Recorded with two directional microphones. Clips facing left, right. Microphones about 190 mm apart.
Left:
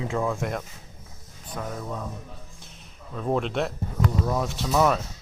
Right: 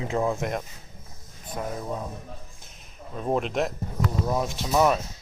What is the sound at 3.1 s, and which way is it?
Speech, 15° right (ahead or behind).